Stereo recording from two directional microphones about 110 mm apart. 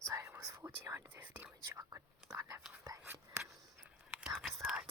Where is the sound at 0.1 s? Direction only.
25° right (ahead or behind).